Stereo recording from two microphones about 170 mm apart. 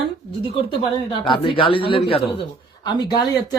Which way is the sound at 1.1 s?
30° left (ahead or behind).